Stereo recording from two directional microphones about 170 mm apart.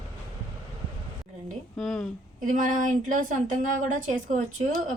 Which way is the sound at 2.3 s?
50° right (ahead or behind).